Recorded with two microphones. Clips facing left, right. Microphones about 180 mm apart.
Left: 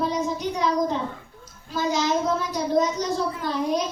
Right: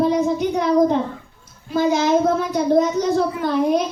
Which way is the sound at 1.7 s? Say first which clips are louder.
Right 7 dB; 60° right (ahead or behind).